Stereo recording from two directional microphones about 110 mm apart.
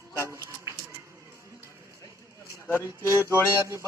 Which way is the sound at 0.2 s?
25° right (ahead or behind).